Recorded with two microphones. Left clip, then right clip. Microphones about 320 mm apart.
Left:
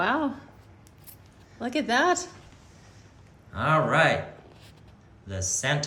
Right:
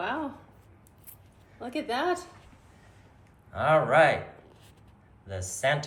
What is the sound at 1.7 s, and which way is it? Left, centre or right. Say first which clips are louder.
Speech: left 6 dB; left.